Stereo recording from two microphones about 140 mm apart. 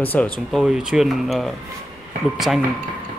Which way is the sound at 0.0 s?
15° left (ahead or behind).